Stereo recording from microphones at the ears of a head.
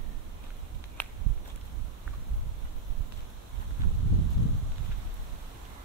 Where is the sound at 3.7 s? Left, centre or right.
Right.